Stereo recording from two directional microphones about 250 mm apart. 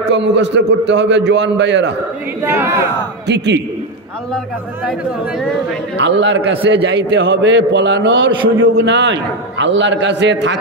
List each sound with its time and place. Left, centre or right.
0.1 s a man's voice: right
2.4 s speech: centre
3.3 s a man's voice: right
5.9 s a man's voice: right